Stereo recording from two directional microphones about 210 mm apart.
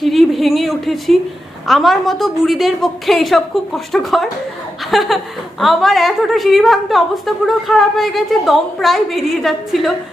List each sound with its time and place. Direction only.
0.0 s a woman's voice: centre (ahead or behind)